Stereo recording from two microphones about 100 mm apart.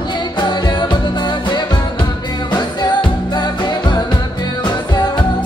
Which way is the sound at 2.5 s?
45° left (ahead or behind).